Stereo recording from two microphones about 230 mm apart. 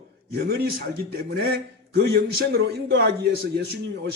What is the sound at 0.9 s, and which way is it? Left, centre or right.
A man's voice, right.